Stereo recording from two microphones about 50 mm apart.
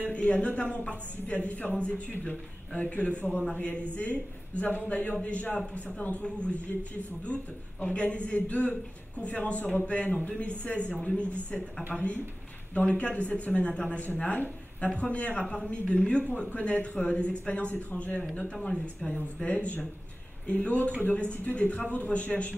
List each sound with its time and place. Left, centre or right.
0.1 s speech: left
19.1 s speech: left